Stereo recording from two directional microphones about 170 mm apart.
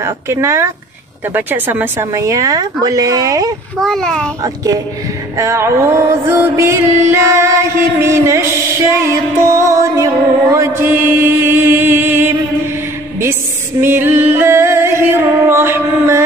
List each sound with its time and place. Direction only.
0.0 s music: 15° right (ahead or behind)
1.3 s a woman's voice: 10° right (ahead or behind)
3.8 s a child's voice: 5° left (ahead or behind)
4.4 s a woman's voice: 20° right (ahead or behind)
5.4 s music: 15° right (ahead or behind)
13.2 s female singing: 15° right (ahead or behind)